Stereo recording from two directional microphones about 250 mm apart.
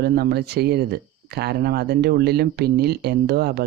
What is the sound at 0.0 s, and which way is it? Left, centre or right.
Speech, right.